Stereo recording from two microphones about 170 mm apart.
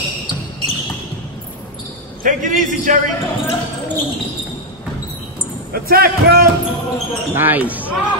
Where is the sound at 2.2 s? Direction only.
50° right (ahead or behind).